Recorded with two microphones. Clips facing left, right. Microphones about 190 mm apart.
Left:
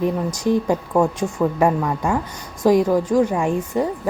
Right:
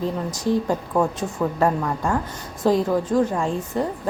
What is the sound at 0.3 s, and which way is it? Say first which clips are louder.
A woman's voice: even; 15° left (ahead or behind).